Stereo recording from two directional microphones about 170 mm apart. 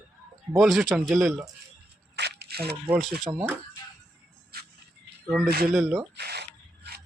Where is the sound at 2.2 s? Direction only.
75° right (ahead or behind).